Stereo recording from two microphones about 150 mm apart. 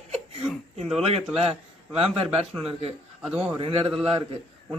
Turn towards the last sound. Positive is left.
turn(degrees=-35)  # may be behind; listen again after turning